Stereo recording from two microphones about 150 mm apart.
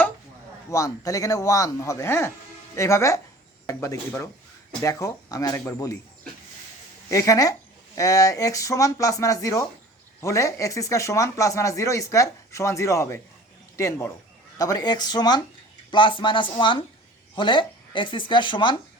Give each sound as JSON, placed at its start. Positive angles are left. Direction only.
{"t": 0.7, "sound": "speech", "side_deg": 20}
{"t": 7.1, "sound": "speech", "side_deg": 20}